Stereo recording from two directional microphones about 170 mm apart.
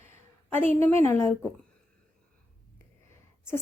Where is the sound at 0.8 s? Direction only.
15° left (ahead or behind).